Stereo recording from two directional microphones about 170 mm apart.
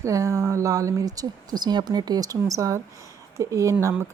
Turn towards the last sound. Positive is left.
turn(degrees=-15)  # may be behind; listen again after turning